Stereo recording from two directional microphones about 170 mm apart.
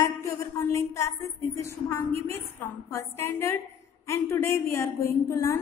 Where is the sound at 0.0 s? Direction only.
15° left (ahead or behind).